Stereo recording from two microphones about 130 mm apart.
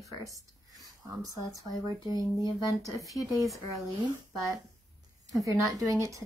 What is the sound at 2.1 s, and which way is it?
Speech, 25° right (ahead or behind).